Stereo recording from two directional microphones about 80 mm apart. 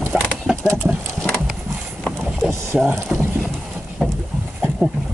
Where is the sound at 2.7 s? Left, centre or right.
Centre.